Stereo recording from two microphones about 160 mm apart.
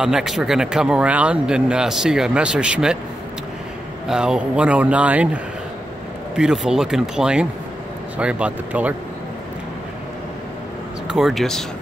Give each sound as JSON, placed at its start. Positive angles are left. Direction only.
{"t": 0.0, "sound": "speech", "side_deg": -5}
{"t": 4.1, "sound": "speech", "side_deg": -5}
{"t": 11.1, "sound": "speech", "side_deg": 0}